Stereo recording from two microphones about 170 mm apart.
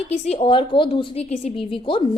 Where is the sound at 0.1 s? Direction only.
35° left (ahead or behind).